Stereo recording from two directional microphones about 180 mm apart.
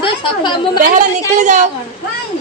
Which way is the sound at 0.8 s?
45° right (ahead or behind).